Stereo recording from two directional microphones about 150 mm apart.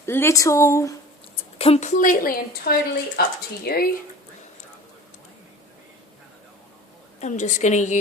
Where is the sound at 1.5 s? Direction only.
40° left (ahead or behind); by 2.7 s 70° left (ahead or behind).